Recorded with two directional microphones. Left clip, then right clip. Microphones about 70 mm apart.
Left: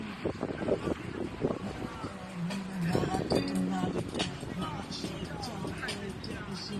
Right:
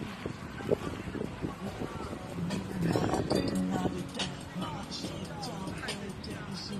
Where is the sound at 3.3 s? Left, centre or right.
Right.